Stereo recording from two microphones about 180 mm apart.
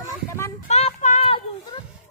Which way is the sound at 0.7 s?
35° left (ahead or behind).